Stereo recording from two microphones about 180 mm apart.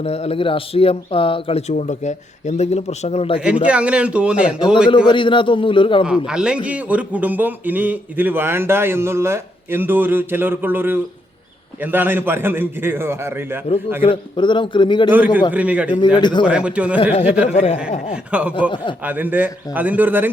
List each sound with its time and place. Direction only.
0.0 s speech: 35° left (ahead or behind)
1.7 s speech: 40° left (ahead or behind)
3.4 s speech: 5° right (ahead or behind)
5.0 s a man's voice: 25° left (ahead or behind)
6.1 s a man's voice: 5° right (ahead or behind)
14.0 s a man's voice: 30° left (ahead or behind)
15.1 s speech: 10° right (ahead or behind)
16.0 s a man's voice: 25° left (ahead or behind)
16.5 s speech: 5° right (ahead or behind)
17.0 s speech: 35° left (ahead or behind)
18.3 s speech: 5° right (ahead or behind)